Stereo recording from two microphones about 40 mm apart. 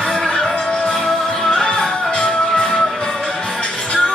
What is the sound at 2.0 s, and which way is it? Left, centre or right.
Music, left.